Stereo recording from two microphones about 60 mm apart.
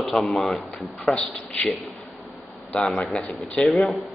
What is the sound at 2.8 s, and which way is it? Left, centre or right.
A man's voice, centre.